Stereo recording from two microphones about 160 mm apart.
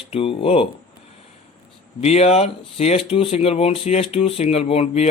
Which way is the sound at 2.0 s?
40° left (ahead or behind).